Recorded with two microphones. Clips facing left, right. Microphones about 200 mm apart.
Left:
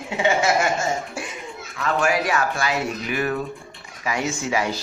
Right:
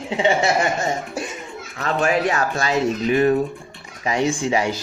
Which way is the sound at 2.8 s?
25° right (ahead or behind).